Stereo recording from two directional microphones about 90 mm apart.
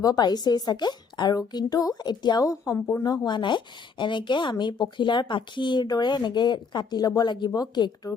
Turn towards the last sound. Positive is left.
turn(degrees=50)  # may be behind; listen again after turning